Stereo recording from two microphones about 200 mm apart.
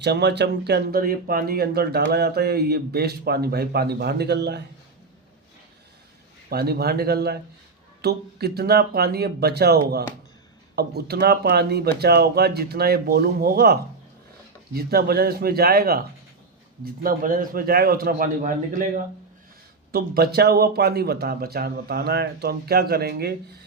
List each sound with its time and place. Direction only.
0.0 s speech: 55° right (ahead or behind)
6.5 s speech: 50° right (ahead or behind)
14.8 s speech: 50° right (ahead or behind)
19.9 s speech: 50° right (ahead or behind)